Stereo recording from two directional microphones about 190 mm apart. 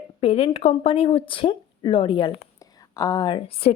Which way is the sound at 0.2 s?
30° left (ahead or behind).